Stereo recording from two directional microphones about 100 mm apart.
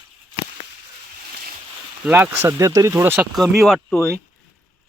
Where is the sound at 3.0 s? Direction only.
20° right (ahead or behind).